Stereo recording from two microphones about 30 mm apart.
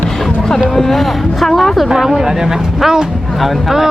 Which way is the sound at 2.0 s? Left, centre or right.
Centre.